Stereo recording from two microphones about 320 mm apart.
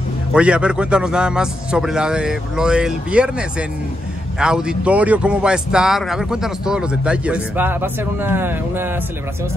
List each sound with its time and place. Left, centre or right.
0.3 s speech: centre